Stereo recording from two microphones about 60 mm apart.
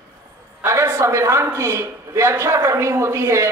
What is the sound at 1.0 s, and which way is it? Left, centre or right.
A man's voice, right.